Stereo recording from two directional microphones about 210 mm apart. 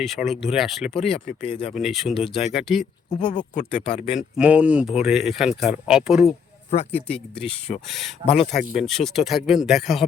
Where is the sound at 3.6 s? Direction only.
35° left (ahead or behind).